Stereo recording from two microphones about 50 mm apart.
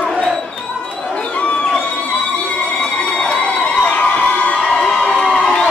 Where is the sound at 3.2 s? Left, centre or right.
Left.